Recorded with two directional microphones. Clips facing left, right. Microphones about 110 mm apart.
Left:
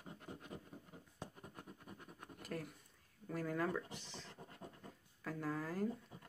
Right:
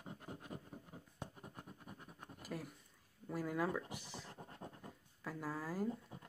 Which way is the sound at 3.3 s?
10° right (ahead or behind).